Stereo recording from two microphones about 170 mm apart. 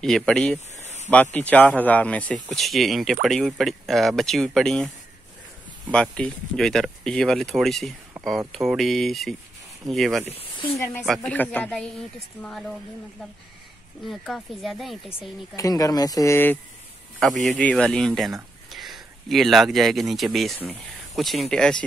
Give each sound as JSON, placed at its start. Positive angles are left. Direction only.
{"t": 0.0, "sound": "speech", "side_deg": 5}
{"t": 0.8, "sound": "a sound", "side_deg": 40}
{"t": 1.1, "sound": "speech", "side_deg": 10}
{"t": 10.4, "sound": "speech", "side_deg": 35}
{"t": 10.8, "sound": "speech", "side_deg": 15}
{"t": 14.0, "sound": "speech", "side_deg": 0}
{"t": 15.5, "sound": "speech", "side_deg": 20}
{"t": 17.2, "sound": "speech", "side_deg": 0}